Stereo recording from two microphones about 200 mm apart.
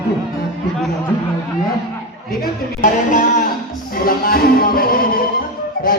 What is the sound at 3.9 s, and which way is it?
Music, 45° left (ahead or behind).